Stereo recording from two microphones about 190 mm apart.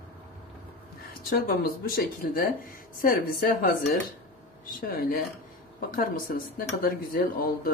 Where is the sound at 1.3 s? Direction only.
50° left (ahead or behind).